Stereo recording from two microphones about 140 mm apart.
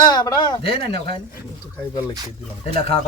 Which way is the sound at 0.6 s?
45° left (ahead or behind).